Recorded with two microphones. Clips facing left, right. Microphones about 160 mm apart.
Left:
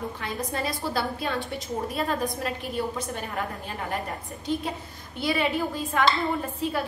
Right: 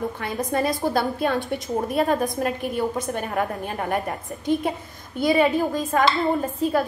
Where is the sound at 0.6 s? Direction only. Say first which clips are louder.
Right 7 dB; 50° right (ahead or behind).